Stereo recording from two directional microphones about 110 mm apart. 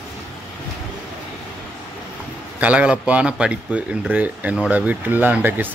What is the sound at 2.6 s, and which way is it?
Speech, 10° right (ahead or behind).